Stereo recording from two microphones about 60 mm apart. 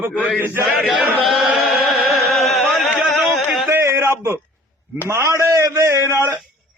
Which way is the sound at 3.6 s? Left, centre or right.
Right.